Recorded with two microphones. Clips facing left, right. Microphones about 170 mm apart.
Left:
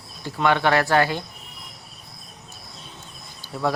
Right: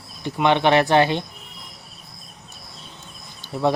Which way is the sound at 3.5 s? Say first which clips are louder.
Right 4 dB; 20° right (ahead or behind).